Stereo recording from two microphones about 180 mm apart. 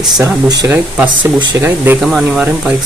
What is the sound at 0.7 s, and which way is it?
Speech, 10° right (ahead or behind).